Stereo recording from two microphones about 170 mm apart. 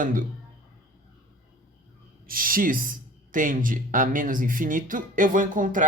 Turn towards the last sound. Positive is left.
turn(degrees=-50)  # may be behind; listen again after turning